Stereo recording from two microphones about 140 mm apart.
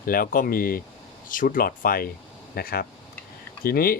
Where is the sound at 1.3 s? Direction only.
75° left (ahead or behind).